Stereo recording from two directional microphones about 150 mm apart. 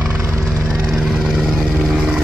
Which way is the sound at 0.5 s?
5° right (ahead or behind).